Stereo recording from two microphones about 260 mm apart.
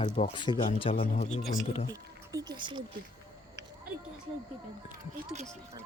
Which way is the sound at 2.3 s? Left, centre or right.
Centre.